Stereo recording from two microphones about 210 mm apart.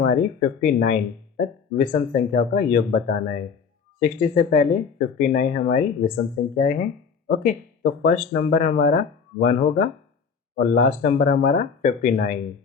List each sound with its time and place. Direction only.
0.0 s speech: 45° left (ahead or behind)